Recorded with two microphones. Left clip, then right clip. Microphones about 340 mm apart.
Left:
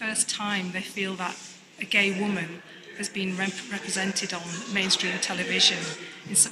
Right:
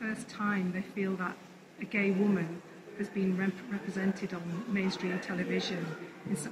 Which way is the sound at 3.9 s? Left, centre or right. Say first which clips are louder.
Left 8 dB; left.